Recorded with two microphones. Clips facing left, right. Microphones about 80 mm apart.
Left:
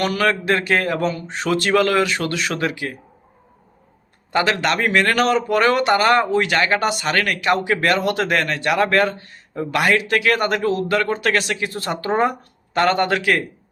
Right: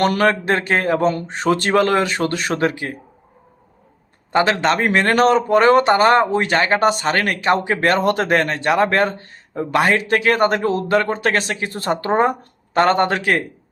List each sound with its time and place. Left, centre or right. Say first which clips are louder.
0.0 s a man's voice: right 3 dB; right
0.4 s speech: right 1 dB; right
4.3 s speech: right 3 dB; right